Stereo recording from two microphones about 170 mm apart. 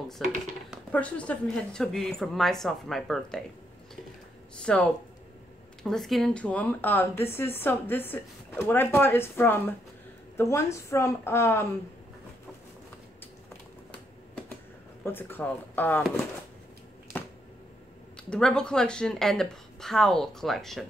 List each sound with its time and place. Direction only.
0.2 s a woman's voice: centre (ahead or behind)
4.6 s speech: 5° left (ahead or behind)
15.0 s speech: 10° left (ahead or behind)
18.3 s a woman's voice: 5° left (ahead or behind)